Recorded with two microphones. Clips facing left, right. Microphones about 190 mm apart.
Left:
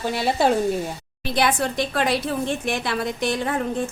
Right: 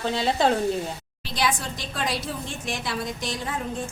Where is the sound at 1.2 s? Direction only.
60° left (ahead or behind).